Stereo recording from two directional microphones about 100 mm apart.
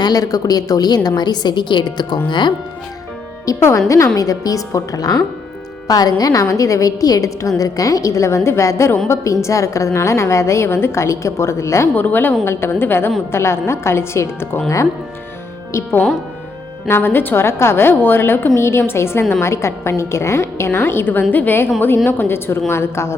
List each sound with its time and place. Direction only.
0.0 s a woman's voice: 40° left (ahead or behind)
3.4 s a woman's voice: 35° left (ahead or behind)
15.7 s a woman's voice: 25° left (ahead or behind)